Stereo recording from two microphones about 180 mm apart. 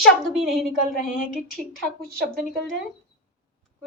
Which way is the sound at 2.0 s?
60° right (ahead or behind).